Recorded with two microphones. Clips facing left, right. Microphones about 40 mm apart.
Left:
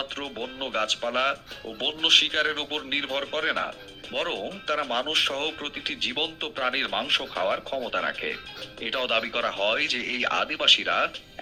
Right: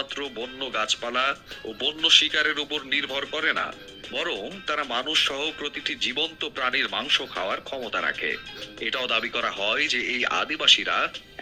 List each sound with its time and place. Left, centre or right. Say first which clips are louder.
0.0 s a man's voice: right 1 dB; right